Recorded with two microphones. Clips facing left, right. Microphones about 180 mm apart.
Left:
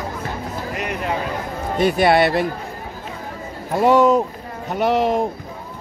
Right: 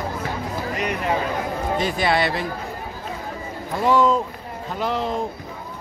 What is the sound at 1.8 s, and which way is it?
Speech, 60° left (ahead or behind).